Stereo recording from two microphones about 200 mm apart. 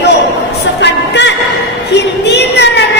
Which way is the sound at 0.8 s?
60° left (ahead or behind).